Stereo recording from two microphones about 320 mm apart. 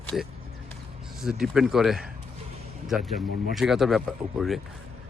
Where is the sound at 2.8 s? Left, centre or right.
Centre.